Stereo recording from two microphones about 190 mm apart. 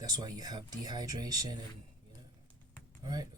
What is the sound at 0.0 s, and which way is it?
Speech, 20° right (ahead or behind).